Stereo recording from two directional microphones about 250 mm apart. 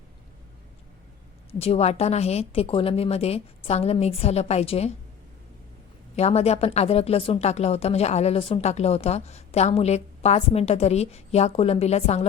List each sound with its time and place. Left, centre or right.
1.5 s speech: left
6.1 s speech: left